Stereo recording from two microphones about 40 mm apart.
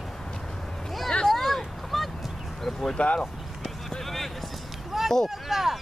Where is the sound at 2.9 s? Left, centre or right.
Left.